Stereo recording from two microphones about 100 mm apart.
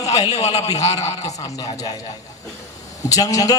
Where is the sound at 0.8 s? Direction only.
35° left (ahead or behind).